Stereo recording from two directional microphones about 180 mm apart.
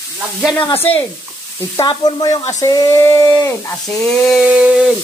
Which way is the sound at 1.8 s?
25° left (ahead or behind).